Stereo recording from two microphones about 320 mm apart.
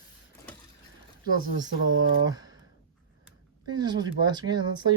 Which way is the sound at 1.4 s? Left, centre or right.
Right.